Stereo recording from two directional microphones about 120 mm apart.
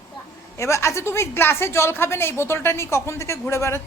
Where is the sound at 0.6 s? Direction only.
25° left (ahead or behind).